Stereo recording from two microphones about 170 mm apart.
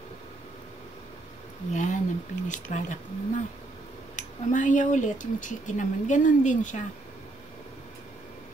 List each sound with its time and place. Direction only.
1.7 s speech: 45° left (ahead or behind)